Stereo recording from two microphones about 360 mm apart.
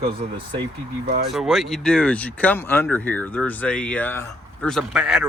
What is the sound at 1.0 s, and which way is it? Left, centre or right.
Speech, right.